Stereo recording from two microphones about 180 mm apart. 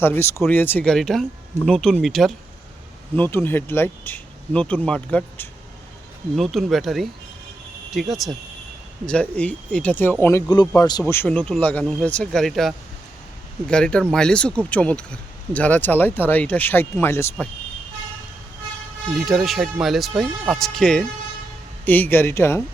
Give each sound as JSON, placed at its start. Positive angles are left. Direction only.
{"t": 0.0, "sound": "speech", "side_deg": 10}
{"t": 3.2, "sound": "speech", "side_deg": 10}
{"t": 11.0, "sound": "speech", "side_deg": 10}
{"t": 19.1, "sound": "speech", "side_deg": 0}